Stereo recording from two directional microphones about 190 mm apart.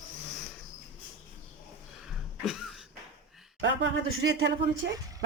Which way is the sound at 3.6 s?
80° right.